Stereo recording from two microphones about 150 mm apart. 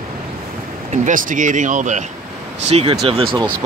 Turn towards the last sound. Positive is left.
turn(degrees=-35)  # may be behind; listen again after turning